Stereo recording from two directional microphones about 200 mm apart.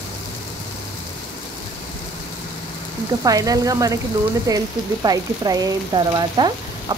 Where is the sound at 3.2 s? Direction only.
15° right (ahead or behind).